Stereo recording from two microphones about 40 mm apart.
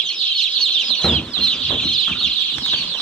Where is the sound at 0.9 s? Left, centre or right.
Centre.